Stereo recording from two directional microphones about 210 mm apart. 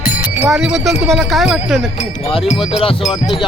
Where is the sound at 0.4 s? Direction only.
5° right (ahead or behind).